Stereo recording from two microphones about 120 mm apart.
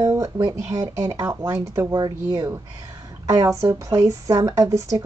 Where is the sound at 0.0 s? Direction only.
25° right (ahead or behind).